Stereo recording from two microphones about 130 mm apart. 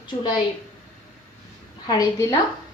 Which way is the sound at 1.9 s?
25° left (ahead or behind).